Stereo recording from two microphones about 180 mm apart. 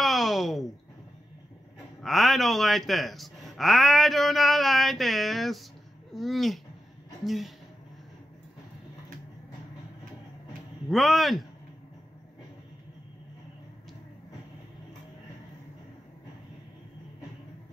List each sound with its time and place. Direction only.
0.0 s a sound: centre (ahead or behind)
2.0 s speech: centre (ahead or behind)
10.9 s speech: centre (ahead or behind)